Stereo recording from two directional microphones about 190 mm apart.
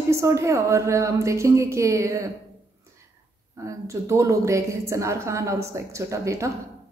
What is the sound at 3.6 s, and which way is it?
A woman's voice, 15° right (ahead or behind).